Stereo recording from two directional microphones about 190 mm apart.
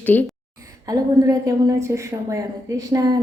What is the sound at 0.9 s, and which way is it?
A woman's voice, 15° right (ahead or behind).